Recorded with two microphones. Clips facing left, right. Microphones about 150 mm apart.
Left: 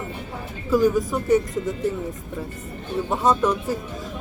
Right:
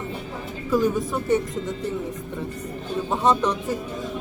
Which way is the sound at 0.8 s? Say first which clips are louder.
Left 4 dB; 25° right (ahead or behind).